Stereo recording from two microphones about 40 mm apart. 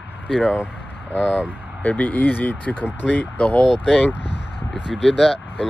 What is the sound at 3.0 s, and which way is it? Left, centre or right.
Speech, left.